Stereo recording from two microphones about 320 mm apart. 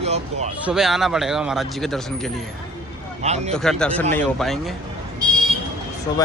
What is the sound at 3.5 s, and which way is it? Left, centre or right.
Speech, centre.